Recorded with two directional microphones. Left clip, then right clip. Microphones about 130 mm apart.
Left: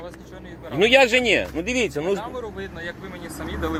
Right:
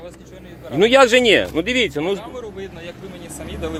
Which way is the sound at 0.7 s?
55° right (ahead or behind).